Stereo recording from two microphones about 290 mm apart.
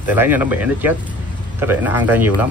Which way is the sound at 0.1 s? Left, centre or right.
Centre.